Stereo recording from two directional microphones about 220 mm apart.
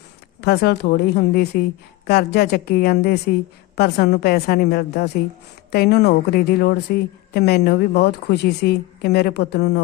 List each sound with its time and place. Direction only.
0.4 s a woman's voice: 45° left (ahead or behind)